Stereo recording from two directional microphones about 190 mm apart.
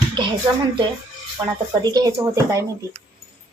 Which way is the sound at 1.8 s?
20° right (ahead or behind).